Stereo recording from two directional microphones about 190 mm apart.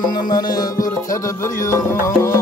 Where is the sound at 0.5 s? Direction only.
20° left (ahead or behind).